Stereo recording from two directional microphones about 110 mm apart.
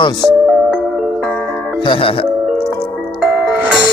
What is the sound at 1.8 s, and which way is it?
Speech, 55° left (ahead or behind).